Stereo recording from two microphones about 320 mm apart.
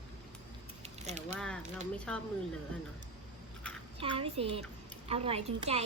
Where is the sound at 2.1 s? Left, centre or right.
Centre.